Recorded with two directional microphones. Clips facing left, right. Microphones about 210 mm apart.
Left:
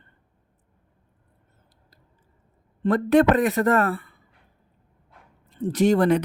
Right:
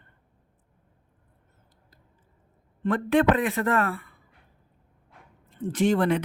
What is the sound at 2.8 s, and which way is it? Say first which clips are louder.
Speech: left 4 dB; 40° left (ahead or behind).